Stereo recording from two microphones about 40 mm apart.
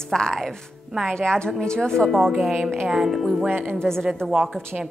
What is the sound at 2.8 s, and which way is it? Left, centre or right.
Speech, centre.